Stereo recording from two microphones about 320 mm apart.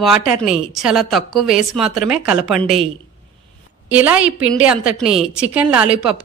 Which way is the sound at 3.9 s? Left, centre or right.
Centre.